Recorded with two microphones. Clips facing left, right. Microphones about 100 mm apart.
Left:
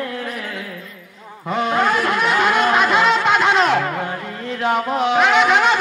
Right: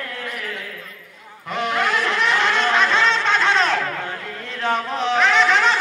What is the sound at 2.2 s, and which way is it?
Music, 10° left (ahead or behind).